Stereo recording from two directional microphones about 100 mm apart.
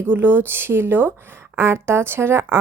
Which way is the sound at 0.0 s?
20° right (ahead or behind).